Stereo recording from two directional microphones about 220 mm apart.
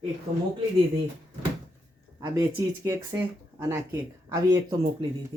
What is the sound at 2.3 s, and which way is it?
Speech, 15° right (ahead or behind).